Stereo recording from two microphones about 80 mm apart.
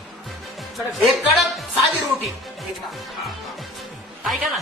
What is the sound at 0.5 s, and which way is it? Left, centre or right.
Music, centre.